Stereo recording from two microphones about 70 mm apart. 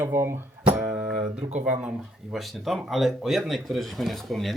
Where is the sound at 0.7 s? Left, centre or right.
Right.